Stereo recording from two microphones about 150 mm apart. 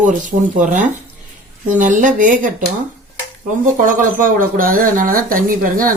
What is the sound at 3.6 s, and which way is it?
Speech, 65° right (ahead or behind).